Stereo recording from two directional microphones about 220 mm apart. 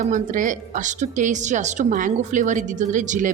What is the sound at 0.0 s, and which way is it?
A woman's voice, 35° right (ahead or behind).